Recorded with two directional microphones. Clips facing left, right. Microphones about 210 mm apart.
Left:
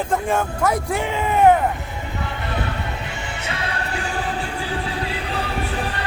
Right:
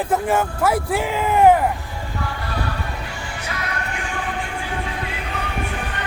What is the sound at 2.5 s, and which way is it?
Music, 20° left (ahead or behind).